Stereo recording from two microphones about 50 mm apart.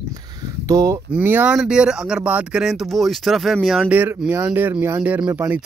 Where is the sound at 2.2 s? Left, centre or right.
Right.